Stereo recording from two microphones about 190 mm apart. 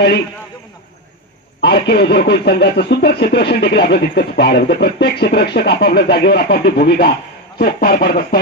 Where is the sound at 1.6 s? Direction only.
60° left (ahead or behind).